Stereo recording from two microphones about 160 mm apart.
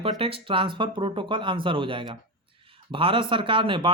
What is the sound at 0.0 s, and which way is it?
Speech, 35° right (ahead or behind).